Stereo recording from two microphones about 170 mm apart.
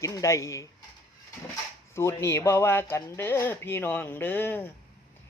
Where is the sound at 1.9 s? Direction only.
15° left (ahead or behind).